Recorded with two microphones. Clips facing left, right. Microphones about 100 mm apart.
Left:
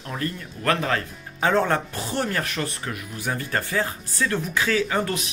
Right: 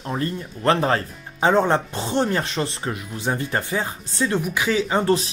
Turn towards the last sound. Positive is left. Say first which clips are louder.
# right 4 dB
turn(degrees=-25)  # may be behind; listen again after turning